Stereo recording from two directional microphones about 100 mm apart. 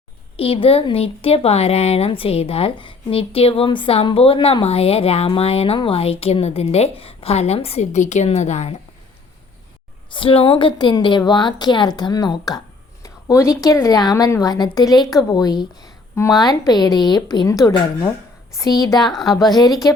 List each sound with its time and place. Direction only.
0.3 s speech: 70° left (ahead or behind)
4.6 s a woman's voice: 85° left
10.1 s a woman's voice: 60° left (ahead or behind); by 19.7 s 40° left (ahead or behind)